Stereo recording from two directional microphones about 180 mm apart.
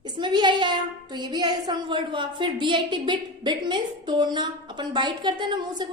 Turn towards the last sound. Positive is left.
turn(degrees=-25)  # may be behind; listen again after turning